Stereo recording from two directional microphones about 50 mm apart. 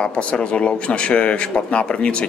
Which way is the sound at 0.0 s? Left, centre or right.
Left.